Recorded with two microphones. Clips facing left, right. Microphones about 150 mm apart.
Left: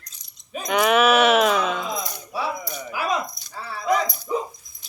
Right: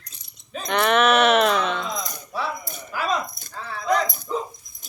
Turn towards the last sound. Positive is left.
turn(degrees=-50)  # may be behind; listen again after turning